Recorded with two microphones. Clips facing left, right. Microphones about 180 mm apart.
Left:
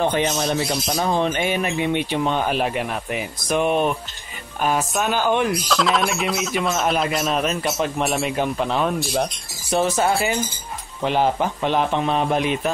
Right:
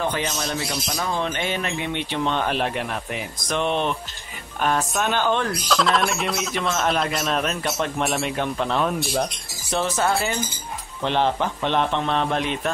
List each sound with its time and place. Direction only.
0.0 s speech: 20° left (ahead or behind)
0.8 s speech: 35° left (ahead or behind)
1.2 s speech: 15° left (ahead or behind)
5.7 s speech: centre (ahead or behind)